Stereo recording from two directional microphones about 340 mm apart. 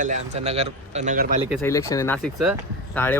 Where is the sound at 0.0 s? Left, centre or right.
Right.